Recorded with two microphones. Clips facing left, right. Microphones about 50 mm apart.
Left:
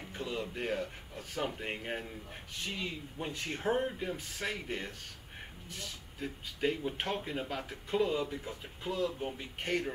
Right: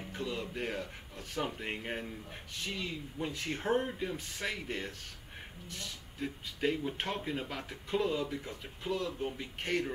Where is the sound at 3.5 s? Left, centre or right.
Centre.